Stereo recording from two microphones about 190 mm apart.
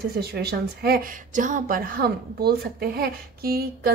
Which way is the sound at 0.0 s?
55° right (ahead or behind).